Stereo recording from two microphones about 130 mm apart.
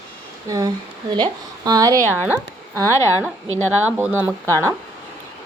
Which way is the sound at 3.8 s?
15° right (ahead or behind).